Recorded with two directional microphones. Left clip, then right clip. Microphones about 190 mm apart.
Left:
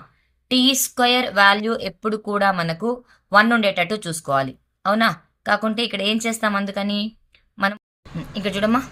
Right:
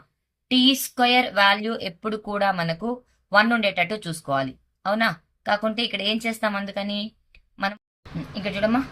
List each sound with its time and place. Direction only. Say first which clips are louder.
0.4 s speech: left 2 dB; 25° left (ahead or behind)